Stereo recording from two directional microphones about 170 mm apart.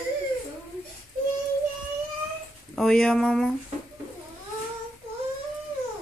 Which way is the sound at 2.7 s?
Centre (ahead or behind).